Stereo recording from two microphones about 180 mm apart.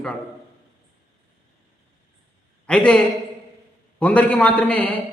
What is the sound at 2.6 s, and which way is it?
A man's voice, 5° left (ahead or behind).